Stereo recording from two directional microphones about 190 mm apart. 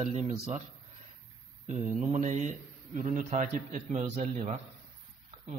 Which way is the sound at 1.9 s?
40° right (ahead or behind).